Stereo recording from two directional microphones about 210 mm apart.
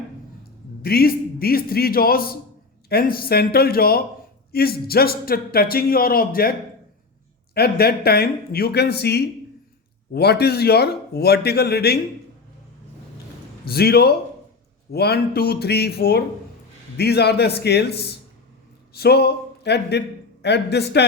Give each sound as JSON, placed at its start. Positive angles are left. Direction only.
{"t": 0.8, "sound": "speech", "side_deg": 45}
{"t": 13.7, "sound": "a man's voice", "side_deg": 50}